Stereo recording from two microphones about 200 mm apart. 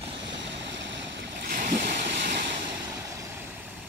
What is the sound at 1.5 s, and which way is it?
Waves, 40° right (ahead or behind).